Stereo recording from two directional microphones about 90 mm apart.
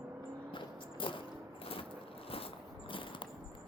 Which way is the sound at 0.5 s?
70° left (ahead or behind).